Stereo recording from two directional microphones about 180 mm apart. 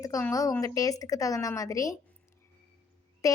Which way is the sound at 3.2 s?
20° left (ahead or behind).